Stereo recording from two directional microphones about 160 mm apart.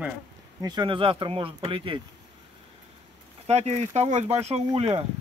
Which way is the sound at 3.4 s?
40° right (ahead or behind).